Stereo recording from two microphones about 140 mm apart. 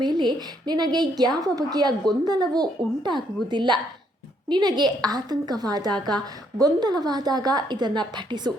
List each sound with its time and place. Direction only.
0.0 s a woman's voice: 30° right (ahead or behind)